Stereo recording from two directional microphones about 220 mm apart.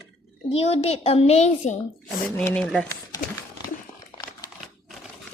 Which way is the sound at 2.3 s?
5° left (ahead or behind).